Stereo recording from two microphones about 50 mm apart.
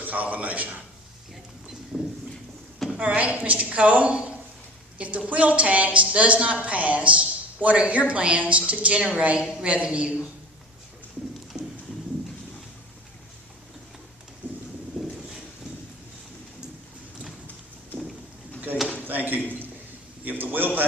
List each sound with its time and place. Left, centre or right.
0.0 s a man's voice: right
1.9 s clip-clop: centre
2.7 s a sound: centre
3.0 s a woman's voice: right
14.4 s vehicle: right
19.0 s a sound: right